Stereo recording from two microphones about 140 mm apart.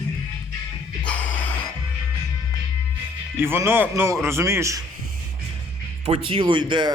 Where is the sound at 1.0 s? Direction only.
10° left (ahead or behind).